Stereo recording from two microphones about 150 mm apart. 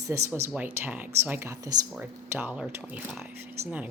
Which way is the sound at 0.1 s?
15° right (ahead or behind).